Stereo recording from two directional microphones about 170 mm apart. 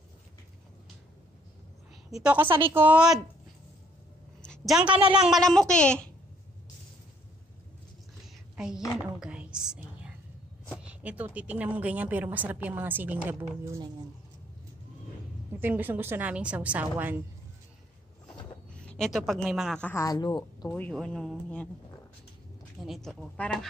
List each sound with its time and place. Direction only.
2.0 s a woman's voice: 5° right (ahead or behind)
4.4 s a sound: centre (ahead or behind)
5.1 s speech: centre (ahead or behind)
8.5 s a woman's voice: 5° right (ahead or behind)
8.9 s whispering: 5° right (ahead or behind)
10.7 s a woman's voice: 5° right (ahead or behind)
15.6 s a woman's voice: 10° right (ahead or behind)
18.7 s a woman's voice: 5° left (ahead or behind)
19.9 s speech: 20° left (ahead or behind)
20.7 s speech: 5° left (ahead or behind)
22.8 s speech: centre (ahead or behind)